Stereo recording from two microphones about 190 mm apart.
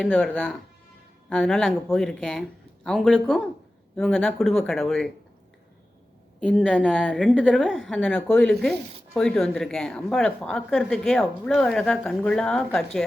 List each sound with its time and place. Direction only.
0.0 s a woman's voice: 5° left (ahead or behind)
6.4 s a woman's voice: 5° left (ahead or behind)